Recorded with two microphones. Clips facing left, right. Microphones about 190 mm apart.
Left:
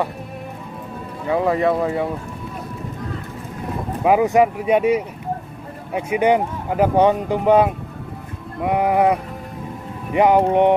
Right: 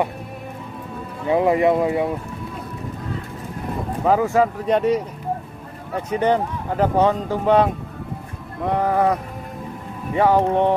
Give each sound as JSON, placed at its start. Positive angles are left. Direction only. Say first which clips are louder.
{"t": 1.2, "sound": "speech", "louder": "right 2 dB", "side_deg": -20}
{"t": 4.0, "sound": "speech", "louder": "left 3 dB", "side_deg": 15}